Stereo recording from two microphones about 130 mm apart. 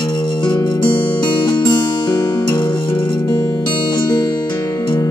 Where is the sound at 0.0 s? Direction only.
40° left (ahead or behind).